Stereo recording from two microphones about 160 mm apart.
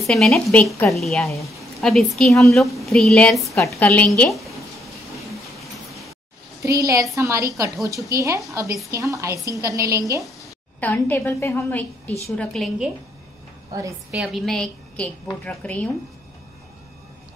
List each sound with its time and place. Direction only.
0.0 s a woman's voice: centre (ahead or behind)
1.6 s a sound: centre (ahead or behind)
2.1 s a woman's voice: 5° left (ahead or behind)
3.5 s a woman's voice: 15° left (ahead or behind)
5.3 s vehicle: centre (ahead or behind)
6.6 s a woman's voice: 20° right (ahead or behind)
10.8 s a woman's voice: 10° left (ahead or behind)
12.4 s a woman's voice: centre (ahead or behind)
14.1 s a woman's voice: centre (ahead or behind)